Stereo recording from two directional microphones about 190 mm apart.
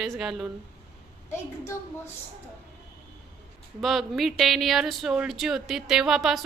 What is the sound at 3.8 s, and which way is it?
Speech, centre (ahead or behind).